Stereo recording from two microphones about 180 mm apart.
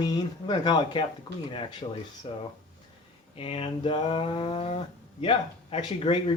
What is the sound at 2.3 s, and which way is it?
Speech, 30° left (ahead or behind).